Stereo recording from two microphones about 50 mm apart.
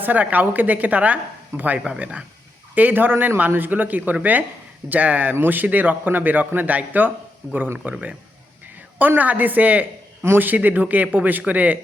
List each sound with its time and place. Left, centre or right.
0.0 s speech: right